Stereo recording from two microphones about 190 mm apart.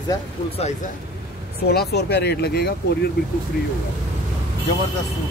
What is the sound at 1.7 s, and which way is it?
Speech, 60° left (ahead or behind).